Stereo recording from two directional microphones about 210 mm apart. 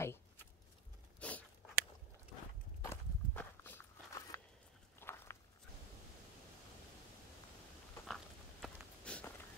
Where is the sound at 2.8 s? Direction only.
10° left (ahead or behind).